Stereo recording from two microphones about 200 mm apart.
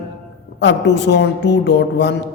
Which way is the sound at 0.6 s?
60° left (ahead or behind).